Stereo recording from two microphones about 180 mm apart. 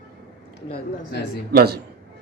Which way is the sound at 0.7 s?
60° left (ahead or behind).